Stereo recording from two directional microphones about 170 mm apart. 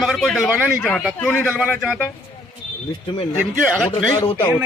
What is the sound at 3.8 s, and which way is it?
Speech, 15° left (ahead or behind).